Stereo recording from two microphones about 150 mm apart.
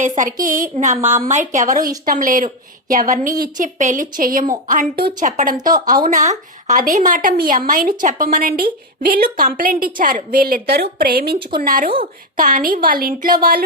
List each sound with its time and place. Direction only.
0.2 s a woman's voice: 65° right (ahead or behind)